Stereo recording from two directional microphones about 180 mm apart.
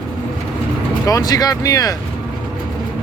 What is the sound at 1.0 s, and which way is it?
Speech, 20° left (ahead or behind).